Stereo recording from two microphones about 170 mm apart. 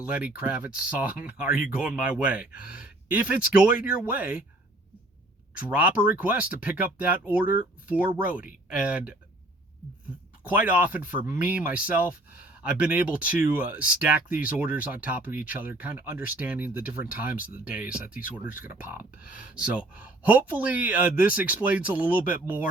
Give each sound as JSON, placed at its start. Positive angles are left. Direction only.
{"t": 0.0, "sound": "speech", "side_deg": -10}
{"t": 5.6, "sound": "speech", "side_deg": -10}
{"t": 10.5, "sound": "speech", "side_deg": -10}